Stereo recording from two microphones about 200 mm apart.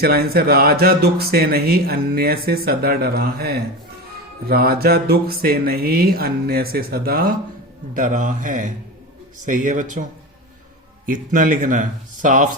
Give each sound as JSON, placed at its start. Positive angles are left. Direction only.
{"t": 0.0, "sound": "speech", "side_deg": -50}